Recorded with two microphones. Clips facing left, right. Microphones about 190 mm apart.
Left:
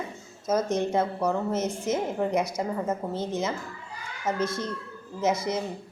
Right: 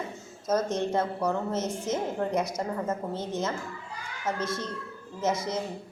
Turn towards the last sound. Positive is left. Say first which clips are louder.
# left 2 dB
turn(degrees=10)  # may be behind; listen again after turning